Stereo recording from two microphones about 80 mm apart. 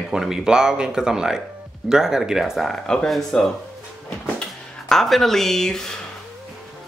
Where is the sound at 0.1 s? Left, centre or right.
Centre.